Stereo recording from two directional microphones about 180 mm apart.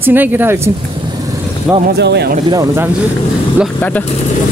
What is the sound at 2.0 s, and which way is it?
Speech, 65° right (ahead or behind).